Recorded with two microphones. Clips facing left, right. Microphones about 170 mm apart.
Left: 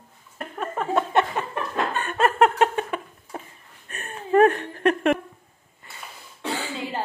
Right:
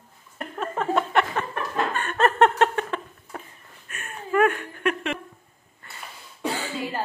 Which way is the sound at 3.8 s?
35° left (ahead or behind).